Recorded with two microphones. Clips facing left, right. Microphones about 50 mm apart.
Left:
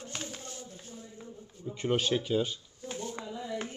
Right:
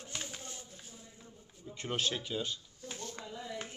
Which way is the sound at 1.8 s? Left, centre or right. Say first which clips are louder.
Left 7 dB; centre.